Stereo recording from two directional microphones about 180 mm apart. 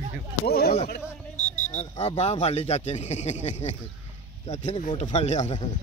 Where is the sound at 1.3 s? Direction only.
40° left (ahead or behind).